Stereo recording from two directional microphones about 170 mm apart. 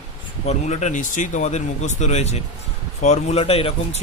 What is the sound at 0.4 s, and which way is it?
Speech, 45° left (ahead or behind).